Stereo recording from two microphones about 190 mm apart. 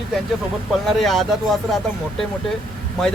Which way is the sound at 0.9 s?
Centre (ahead or behind).